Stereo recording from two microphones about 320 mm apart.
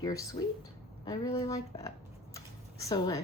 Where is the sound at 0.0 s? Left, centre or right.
Centre.